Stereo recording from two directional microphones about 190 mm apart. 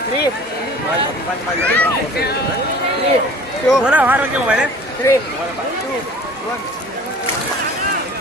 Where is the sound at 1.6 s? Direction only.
10° left (ahead or behind).